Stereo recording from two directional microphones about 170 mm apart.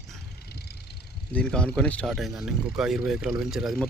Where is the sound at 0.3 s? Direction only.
70° left (ahead or behind).